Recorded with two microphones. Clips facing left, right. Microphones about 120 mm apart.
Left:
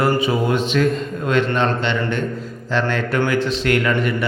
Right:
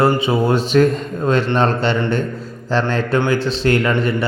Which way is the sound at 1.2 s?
35° right (ahead or behind).